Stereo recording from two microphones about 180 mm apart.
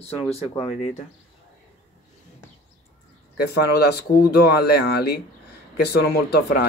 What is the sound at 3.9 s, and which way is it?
Speech, 60° left (ahead or behind).